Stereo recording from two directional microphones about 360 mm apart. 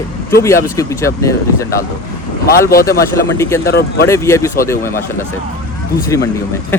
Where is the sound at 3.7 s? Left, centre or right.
Left.